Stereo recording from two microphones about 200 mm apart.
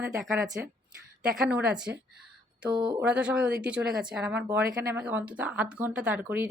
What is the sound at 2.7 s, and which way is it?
Speech, 25° right (ahead or behind).